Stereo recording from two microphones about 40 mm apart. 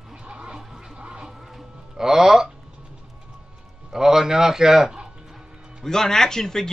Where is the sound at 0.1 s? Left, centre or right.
Right.